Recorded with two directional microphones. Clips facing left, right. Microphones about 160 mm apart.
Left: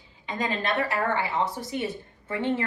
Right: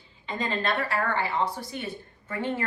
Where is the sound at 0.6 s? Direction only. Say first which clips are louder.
Left 1 dB; 20° left (ahead or behind).